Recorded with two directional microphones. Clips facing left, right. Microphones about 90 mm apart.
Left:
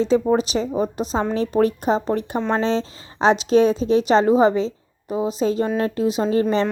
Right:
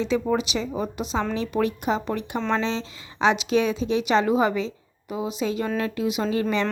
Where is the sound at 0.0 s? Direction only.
35° left (ahead or behind).